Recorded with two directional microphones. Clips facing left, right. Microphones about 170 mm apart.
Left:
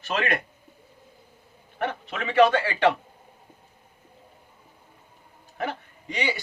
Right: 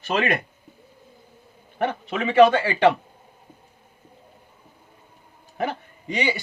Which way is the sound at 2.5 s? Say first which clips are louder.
Right 3 dB; 15° right (ahead or behind).